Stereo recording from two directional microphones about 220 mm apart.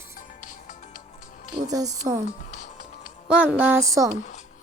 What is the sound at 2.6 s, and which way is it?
Music, 40° left (ahead or behind).